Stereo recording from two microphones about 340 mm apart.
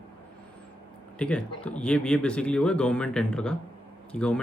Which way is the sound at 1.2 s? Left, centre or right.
Centre.